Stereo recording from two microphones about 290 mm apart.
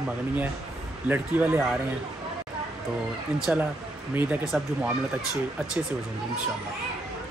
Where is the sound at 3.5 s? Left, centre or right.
Centre.